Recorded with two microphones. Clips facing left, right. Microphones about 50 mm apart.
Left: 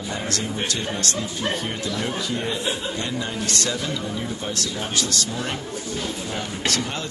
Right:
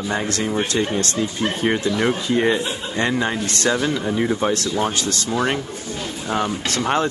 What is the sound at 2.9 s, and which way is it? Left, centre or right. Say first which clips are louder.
Speech: right 7 dB; right.